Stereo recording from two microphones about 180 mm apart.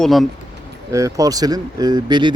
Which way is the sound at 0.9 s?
15° right (ahead or behind).